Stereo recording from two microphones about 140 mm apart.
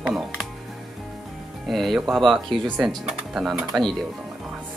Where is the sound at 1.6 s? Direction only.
Centre (ahead or behind).